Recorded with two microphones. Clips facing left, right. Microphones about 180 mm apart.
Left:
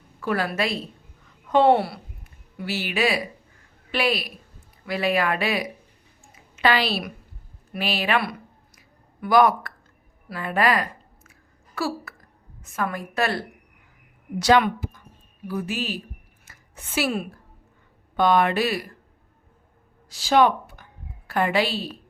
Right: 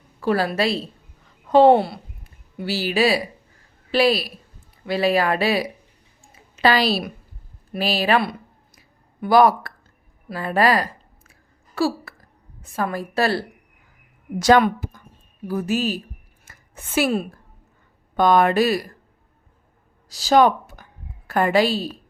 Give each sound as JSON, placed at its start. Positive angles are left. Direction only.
{"t": 0.2, "sound": "a woman's voice", "side_deg": -30}
{"t": 14.3, "sound": "a woman's voice", "side_deg": -45}
{"t": 16.5, "sound": "a sound", "side_deg": -50}
{"t": 18.2, "sound": "a woman's voice", "side_deg": -45}
{"t": 20.1, "sound": "speech", "side_deg": -40}